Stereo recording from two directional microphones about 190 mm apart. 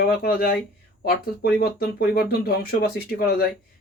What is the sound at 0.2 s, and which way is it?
Speech, 50° left (ahead or behind).